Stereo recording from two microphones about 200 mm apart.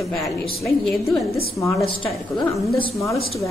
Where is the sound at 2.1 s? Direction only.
20° left (ahead or behind).